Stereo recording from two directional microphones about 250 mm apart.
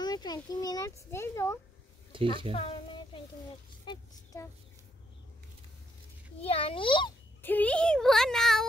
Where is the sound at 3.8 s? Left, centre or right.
Centre.